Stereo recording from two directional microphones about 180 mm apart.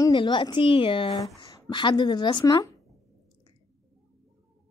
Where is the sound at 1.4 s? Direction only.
20° left (ahead or behind).